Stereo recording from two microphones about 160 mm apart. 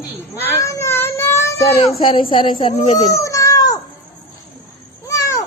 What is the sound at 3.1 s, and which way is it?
Cat, 20° left (ahead or behind).